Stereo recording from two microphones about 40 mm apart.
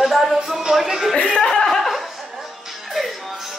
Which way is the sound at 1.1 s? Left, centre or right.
Left.